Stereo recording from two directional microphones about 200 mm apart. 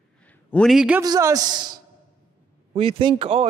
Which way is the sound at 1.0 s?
20° right (ahead or behind).